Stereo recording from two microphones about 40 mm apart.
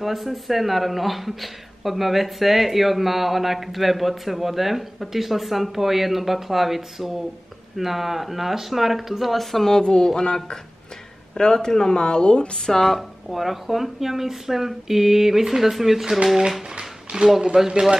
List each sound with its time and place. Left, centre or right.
0.0 s speech: centre
12.8 s speech: centre
16.7 s a sound: right
17.6 s speech: centre